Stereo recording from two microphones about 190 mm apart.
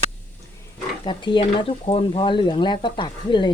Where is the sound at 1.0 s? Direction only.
25° left (ahead or behind).